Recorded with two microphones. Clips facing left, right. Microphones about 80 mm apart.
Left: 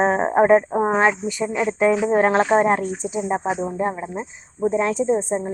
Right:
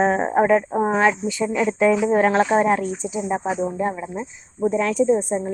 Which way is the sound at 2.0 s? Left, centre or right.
Left.